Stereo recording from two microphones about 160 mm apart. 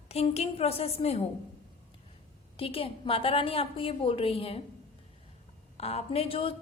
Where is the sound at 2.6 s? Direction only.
35° left (ahead or behind).